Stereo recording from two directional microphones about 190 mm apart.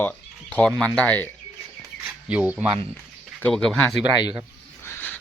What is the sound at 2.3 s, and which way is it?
Speech, 5° right (ahead or behind).